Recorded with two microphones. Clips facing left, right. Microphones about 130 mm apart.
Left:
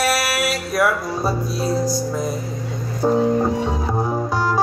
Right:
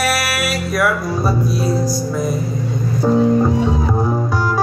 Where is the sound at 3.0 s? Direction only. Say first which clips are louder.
Right 3 dB; 15° left (ahead or behind).